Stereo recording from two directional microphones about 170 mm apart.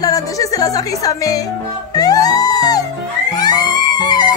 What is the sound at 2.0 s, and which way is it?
Music, 20° left (ahead or behind).